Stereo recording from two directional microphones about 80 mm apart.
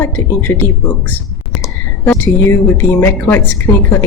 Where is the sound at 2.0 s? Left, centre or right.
Left.